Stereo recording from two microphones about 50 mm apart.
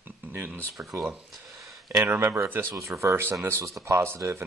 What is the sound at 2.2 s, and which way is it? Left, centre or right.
Speech, right.